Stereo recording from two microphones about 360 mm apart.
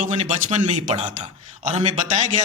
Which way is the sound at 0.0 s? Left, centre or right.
Centre.